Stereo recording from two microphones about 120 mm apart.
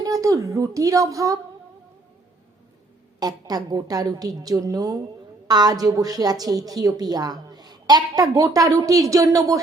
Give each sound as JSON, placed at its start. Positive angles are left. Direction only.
{"t": 0.0, "sound": "speech", "side_deg": -30}
{"t": 3.2, "sound": "a woman's voice", "side_deg": -35}